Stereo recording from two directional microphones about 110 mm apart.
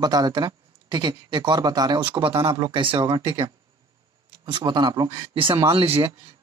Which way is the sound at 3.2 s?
25° right (ahead or behind).